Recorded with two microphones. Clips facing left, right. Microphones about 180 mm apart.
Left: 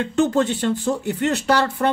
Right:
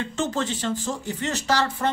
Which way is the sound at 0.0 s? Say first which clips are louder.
Left 8 dB; 60° left (ahead or behind).